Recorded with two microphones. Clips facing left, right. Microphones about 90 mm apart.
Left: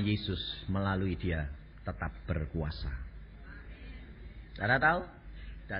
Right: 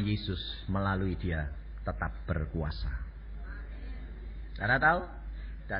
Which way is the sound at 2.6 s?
Centre (ahead or behind).